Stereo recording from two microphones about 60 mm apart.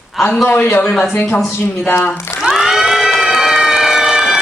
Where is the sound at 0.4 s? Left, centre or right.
Left.